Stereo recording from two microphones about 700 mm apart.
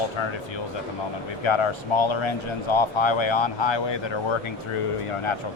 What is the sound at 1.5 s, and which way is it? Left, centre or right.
A man's voice, left.